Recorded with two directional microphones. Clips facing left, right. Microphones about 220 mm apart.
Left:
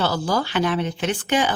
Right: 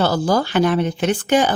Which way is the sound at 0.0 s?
45° right (ahead or behind).